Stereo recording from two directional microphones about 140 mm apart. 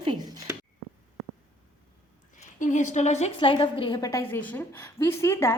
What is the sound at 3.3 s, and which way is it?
Speech, 40° left (ahead or behind).